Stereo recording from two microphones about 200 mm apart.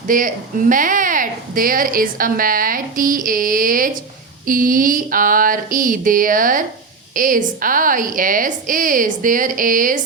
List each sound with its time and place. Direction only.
0.1 s speech: 40° right (ahead or behind)